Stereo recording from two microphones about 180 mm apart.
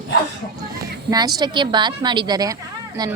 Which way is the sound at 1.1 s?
20° right (ahead or behind).